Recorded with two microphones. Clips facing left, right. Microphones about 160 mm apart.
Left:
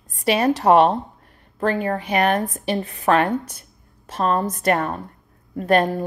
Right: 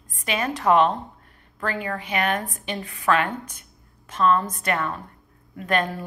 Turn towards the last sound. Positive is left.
turn(degrees=40)  # may be behind; listen again after turning